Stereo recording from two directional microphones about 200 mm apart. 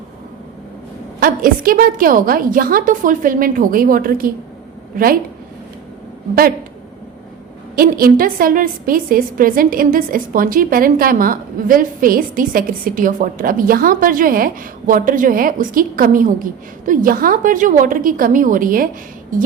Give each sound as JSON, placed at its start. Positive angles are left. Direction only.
{"t": 1.2, "sound": "a woman's voice", "side_deg": -45}
{"t": 7.8, "sound": "a woman's voice", "side_deg": -45}